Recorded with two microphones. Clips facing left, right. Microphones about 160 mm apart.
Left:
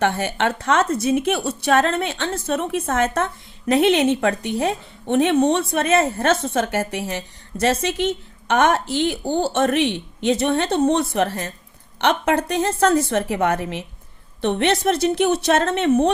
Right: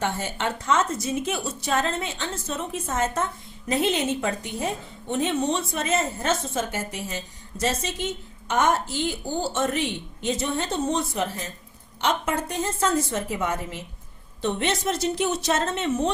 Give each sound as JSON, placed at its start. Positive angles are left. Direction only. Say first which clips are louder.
{"t": 0.0, "sound": "a woman's voice", "louder": "left 7 dB", "side_deg": 70}